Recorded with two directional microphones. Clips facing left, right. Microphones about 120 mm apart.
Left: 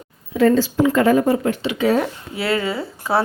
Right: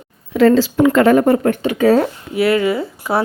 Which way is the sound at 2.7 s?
15° right (ahead or behind).